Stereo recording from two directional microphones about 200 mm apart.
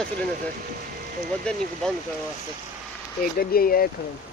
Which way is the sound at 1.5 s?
5° left (ahead or behind).